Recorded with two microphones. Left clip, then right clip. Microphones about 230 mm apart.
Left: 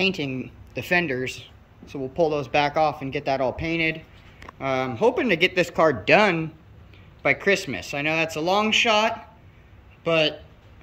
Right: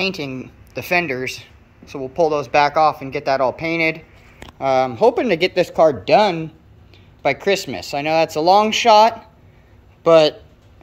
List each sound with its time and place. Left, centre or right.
0.0 s speech: centre
7.2 s speech: centre